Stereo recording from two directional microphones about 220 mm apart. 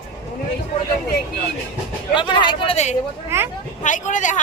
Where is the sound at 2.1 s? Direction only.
20° left (ahead or behind).